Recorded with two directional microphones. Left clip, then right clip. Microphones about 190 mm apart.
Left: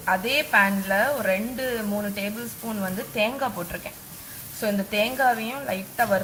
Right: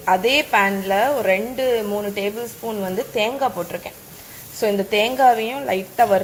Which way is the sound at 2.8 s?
20° right (ahead or behind).